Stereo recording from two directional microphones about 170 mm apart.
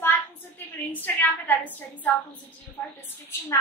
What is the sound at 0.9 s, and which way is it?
A woman's voice, 10° left (ahead or behind).